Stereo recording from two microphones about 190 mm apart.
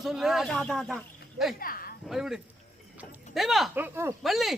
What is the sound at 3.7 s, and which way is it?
Speech, 10° right (ahead or behind).